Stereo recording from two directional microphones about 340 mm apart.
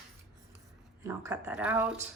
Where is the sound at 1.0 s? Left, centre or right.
Centre.